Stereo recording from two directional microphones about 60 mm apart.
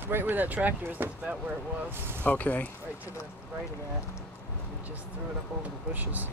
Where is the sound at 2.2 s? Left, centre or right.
Left.